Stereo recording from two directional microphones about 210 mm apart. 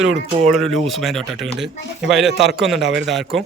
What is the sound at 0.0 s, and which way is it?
Speech, centre (ahead or behind).